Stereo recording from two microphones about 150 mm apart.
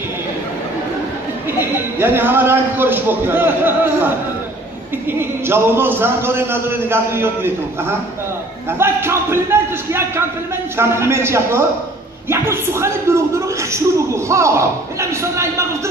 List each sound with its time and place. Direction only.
1.6 s speech: 15° right (ahead or behind)
5.5 s speech: 15° right (ahead or behind)
8.7 s speech: 15° right (ahead or behind)